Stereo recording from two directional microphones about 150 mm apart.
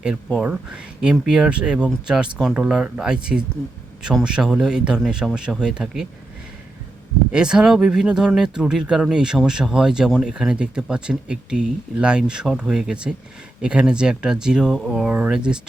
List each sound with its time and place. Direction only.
0.3 s speech: 5° right (ahead or behind)
7.3 s speech: 5° right (ahead or behind)